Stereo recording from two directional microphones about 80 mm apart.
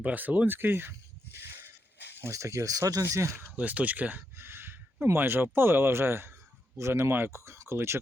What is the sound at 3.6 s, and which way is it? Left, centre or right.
Speech, centre.